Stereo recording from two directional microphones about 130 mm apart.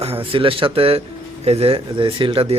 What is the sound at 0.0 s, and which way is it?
Speech, 45° right (ahead or behind).